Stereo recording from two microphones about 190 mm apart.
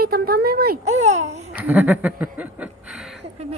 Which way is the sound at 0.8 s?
35° right (ahead or behind).